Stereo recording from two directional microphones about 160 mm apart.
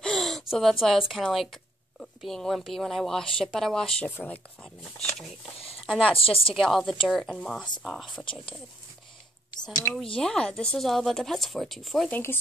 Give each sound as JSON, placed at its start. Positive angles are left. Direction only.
{"t": 0.0, "sound": "a sound", "side_deg": 0}
{"t": 1.0, "sound": "a woman's voice", "side_deg": 0}
{"t": 5.9, "sound": "speech", "side_deg": 0}
{"t": 6.1, "sound": "speech", "side_deg": 35}
{"t": 6.5, "sound": "a woman's voice", "side_deg": 0}
{"t": 9.5, "sound": "speech", "side_deg": 25}
{"t": 10.1, "sound": "a woman's voice", "side_deg": 5}